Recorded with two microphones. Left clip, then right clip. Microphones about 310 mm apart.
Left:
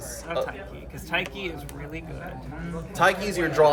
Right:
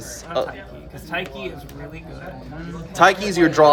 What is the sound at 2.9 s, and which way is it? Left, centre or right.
Speech, right.